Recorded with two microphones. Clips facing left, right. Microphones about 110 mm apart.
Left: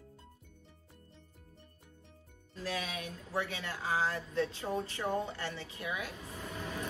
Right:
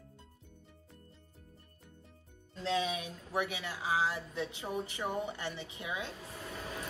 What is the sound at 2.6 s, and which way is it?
Speech, 25° right (ahead or behind).